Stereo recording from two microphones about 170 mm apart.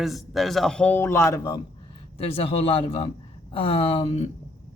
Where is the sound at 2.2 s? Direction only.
35° left (ahead or behind).